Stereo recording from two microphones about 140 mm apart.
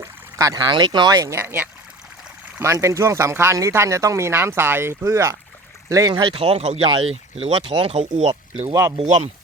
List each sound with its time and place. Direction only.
0.0 s speech: 25° right (ahead or behind)
6.1 s speech: 40° right (ahead or behind)
9.0 s speech: 50° right (ahead or behind)